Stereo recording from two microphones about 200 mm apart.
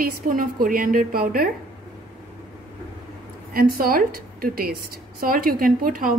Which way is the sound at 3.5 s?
45° right (ahead or behind).